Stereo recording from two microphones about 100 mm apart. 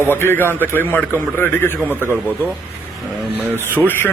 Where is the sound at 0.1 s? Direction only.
25° left (ahead or behind).